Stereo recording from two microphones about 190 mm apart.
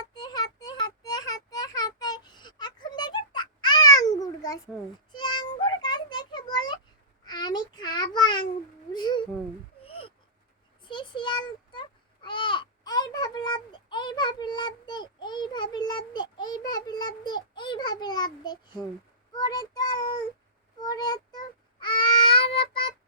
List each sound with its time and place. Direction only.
0.1 s child singing: 20° left (ahead or behind)
5.1 s meow: 25° left (ahead or behind)
7.3 s child singing: 20° left (ahead or behind)
8.9 s a sound: 25° left (ahead or behind)
19.3 s child singing: 20° left (ahead or behind)